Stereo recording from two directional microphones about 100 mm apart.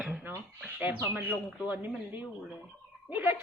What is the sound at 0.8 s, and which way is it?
A woman's voice, 20° right (ahead or behind).